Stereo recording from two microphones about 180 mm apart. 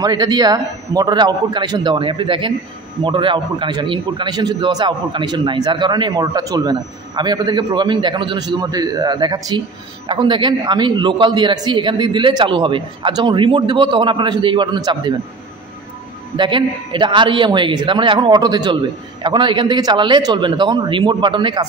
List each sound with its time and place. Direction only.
0.0 s a man's voice: 25° right (ahead or behind)
16.3 s a man's voice: 25° right (ahead or behind)